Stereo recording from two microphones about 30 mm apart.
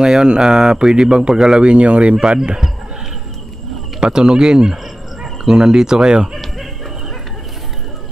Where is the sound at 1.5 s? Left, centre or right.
Right.